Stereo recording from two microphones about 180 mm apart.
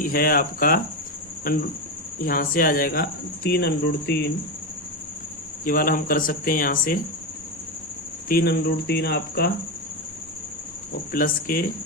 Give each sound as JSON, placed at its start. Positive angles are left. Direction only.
{"t": 0.0, "sound": "speech", "side_deg": 55}
{"t": 2.1, "sound": "speech", "side_deg": 50}
{"t": 5.6, "sound": "speech", "side_deg": 50}
{"t": 8.3, "sound": "speech", "side_deg": 60}
{"t": 11.1, "sound": "speech", "side_deg": 50}